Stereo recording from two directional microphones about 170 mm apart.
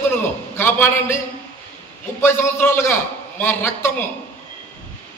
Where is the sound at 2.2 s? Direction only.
15° left (ahead or behind).